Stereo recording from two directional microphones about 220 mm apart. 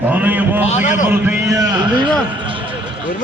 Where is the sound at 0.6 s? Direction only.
35° left (ahead or behind).